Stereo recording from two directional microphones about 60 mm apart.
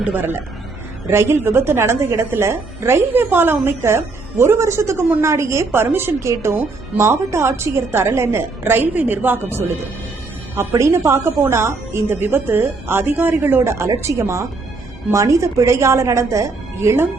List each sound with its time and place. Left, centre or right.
0.2 s a man's voice: right